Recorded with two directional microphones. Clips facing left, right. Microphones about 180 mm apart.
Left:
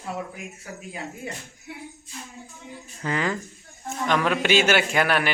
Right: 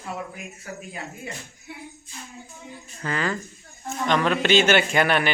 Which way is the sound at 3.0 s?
15° left (ahead or behind).